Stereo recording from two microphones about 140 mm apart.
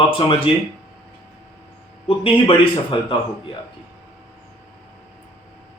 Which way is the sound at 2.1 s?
40° left (ahead or behind).